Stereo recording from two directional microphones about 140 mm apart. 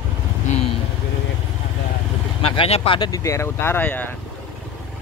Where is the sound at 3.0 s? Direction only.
25° left (ahead or behind).